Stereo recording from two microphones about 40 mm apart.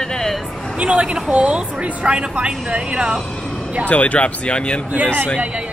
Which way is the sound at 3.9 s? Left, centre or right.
Left.